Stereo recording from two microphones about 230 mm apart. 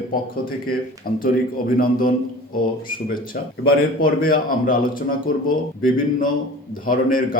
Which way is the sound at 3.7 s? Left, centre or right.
Left.